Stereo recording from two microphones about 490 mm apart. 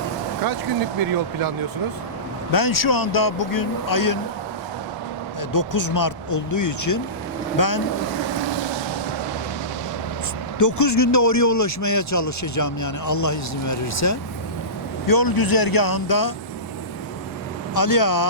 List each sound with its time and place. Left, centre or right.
2.5 s speech: left
5.5 s speech: left
10.6 s speech: left
17.7 s speech: left